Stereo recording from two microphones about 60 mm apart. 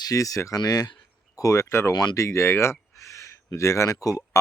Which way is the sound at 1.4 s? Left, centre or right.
Left.